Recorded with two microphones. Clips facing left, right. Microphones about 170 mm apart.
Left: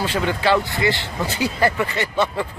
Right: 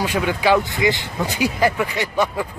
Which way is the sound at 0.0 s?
15° right (ahead or behind).